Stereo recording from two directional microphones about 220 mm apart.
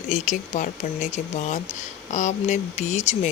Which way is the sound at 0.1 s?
35° left (ahead or behind).